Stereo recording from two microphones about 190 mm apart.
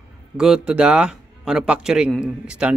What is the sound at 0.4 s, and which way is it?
A man's voice, 5° right (ahead or behind).